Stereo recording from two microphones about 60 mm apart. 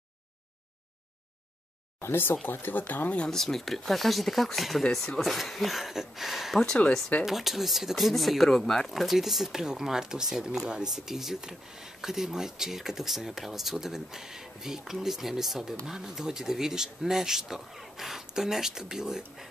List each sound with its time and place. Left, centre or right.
2.0 s speech: left
3.3 s speech: centre